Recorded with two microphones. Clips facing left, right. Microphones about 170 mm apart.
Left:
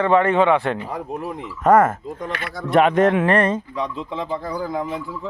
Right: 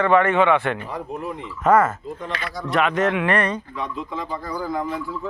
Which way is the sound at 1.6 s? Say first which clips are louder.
Left 2 dB; 50° left (ahead or behind).